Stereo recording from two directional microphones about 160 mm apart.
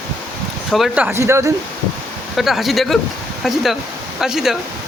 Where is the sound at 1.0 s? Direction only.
15° right (ahead or behind).